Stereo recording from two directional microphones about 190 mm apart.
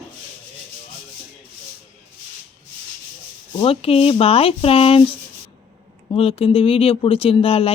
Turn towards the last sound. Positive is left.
turn(degrees=30)  # may be behind; listen again after turning